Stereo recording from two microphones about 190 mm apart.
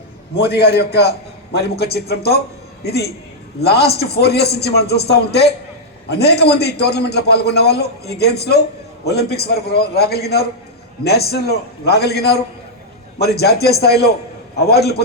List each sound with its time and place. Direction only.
0.4 s a man's voice: 55° left (ahead or behind)